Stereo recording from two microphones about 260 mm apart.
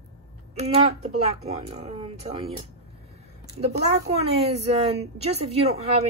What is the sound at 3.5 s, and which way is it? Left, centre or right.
Speech, right.